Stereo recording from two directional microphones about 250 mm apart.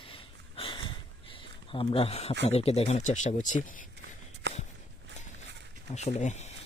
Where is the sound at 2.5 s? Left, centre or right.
Left.